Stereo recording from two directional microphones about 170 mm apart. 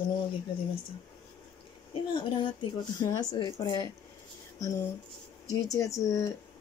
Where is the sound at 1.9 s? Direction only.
30° left (ahead or behind).